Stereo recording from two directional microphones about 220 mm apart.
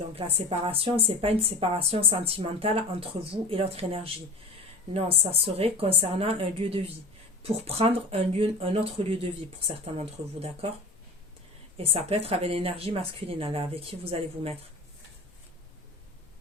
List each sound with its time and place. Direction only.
0.2 s a woman's voice: 25° right (ahead or behind)
11.8 s a woman's voice: 25° right (ahead or behind)